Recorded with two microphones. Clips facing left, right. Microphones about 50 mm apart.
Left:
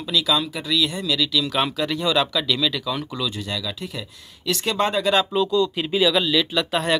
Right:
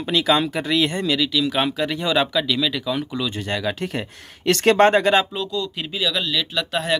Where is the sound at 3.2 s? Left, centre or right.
Right.